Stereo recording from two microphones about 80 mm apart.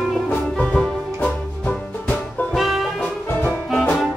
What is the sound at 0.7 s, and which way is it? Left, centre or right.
Music, centre.